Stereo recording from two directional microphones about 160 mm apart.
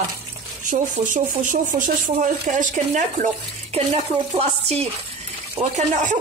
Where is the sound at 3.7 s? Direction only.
40° right (ahead or behind).